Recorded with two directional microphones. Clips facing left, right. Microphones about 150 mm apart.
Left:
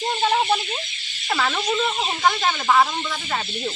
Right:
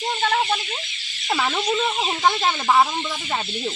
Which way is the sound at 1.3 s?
10° right (ahead or behind).